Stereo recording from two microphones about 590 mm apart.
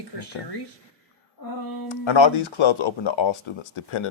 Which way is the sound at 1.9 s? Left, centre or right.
Left.